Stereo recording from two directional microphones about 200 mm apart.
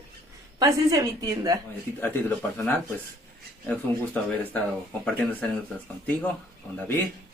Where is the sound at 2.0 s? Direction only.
10° left (ahead or behind).